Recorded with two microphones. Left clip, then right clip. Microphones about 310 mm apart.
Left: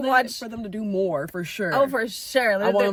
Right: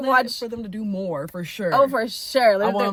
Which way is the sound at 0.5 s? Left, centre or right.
Centre.